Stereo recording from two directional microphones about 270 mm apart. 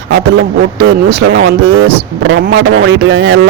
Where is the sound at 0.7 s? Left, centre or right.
Right.